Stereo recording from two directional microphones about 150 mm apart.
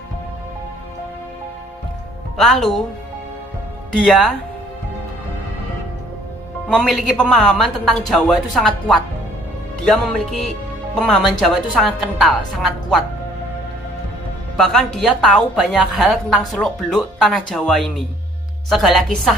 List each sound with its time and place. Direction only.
2.3 s a woman's voice: centre (ahead or behind)
4.0 s a woman's voice: centre (ahead or behind)
6.7 s a woman's voice: centre (ahead or behind)
14.6 s a woman's voice: 5° left (ahead or behind)